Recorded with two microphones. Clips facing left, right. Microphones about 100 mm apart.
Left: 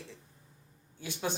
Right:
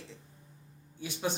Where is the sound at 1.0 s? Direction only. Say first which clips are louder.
Right 1 dB; 20° right (ahead or behind).